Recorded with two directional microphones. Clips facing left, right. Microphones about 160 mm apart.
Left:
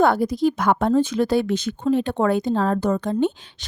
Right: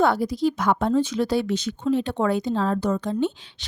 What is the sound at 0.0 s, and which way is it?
A woman's voice, 50° left (ahead or behind).